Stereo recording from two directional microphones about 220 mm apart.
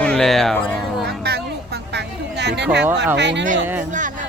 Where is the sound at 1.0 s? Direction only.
45° right (ahead or behind).